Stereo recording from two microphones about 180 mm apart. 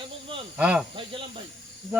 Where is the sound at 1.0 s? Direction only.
30° right (ahead or behind).